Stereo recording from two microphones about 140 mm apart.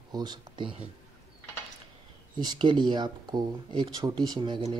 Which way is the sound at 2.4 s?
30° right (ahead or behind).